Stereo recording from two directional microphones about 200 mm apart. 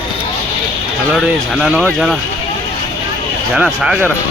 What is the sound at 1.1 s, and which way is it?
Speech, centre (ahead or behind).